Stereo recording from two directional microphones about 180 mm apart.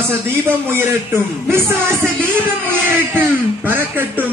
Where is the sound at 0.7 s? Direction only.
10° right (ahead or behind).